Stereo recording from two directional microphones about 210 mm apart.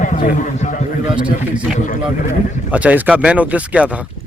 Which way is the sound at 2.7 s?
5° right (ahead or behind).